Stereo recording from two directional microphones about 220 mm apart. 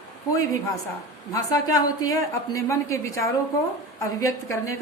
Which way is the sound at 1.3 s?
15° left (ahead or behind).